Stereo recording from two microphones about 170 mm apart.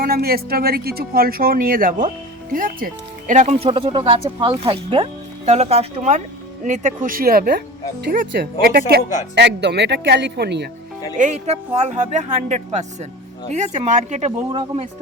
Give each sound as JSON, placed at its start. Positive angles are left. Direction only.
{"t": 0.0, "sound": "speech", "side_deg": -65}
{"t": 9.3, "sound": "speech", "side_deg": -80}
{"t": 11.2, "sound": "speech", "side_deg": -40}